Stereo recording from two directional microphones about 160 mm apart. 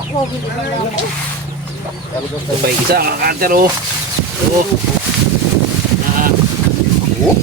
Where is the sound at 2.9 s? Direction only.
70° right (ahead or behind).